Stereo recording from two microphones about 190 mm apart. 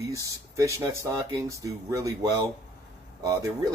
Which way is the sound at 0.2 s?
15° right (ahead or behind).